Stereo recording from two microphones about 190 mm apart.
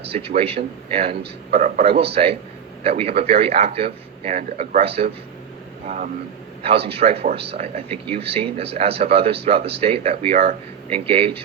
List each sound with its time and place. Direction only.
0.1 s a man's voice: 30° right (ahead or behind)
1.2 s a man's voice: 45° right (ahead or behind)
2.8 s a man's voice: 30° right (ahead or behind)
6.6 s a man's voice: 30° right (ahead or behind)